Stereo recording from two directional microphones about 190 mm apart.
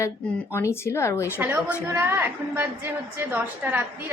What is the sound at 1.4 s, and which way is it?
A woman's voice, 10° right (ahead or behind).